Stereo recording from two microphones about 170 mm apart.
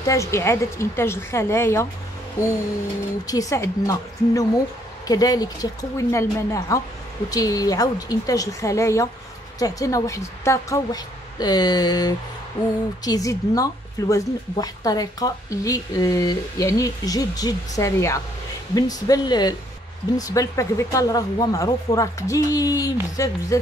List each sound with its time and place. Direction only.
0.0 s a woman's voice: 20° left (ahead or behind)
3.3 s a woman's voice: 20° left (ahead or behind)